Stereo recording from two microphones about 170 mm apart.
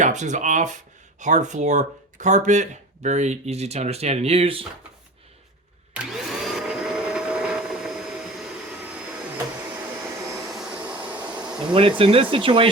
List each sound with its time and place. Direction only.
0.0 s speech: 45° right (ahead or behind)
5.9 s vacuum cleaner: centre (ahead or behind)
10.5 s bee: 5° right (ahead or behind)
11.7 s speech: 30° right (ahead or behind)